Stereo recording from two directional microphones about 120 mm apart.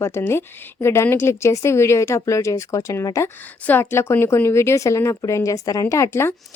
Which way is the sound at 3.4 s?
15° left (ahead or behind).